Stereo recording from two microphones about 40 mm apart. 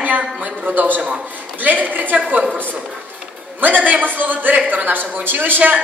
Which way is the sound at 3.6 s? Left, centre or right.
Right.